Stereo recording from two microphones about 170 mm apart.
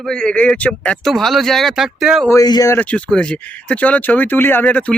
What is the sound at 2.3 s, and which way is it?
Speech, 20° left (ahead or behind).